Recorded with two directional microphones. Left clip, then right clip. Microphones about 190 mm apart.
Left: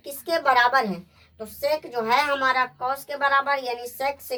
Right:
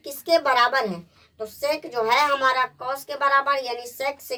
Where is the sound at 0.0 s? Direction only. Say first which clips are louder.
Right 3 dB; 20° right (ahead or behind).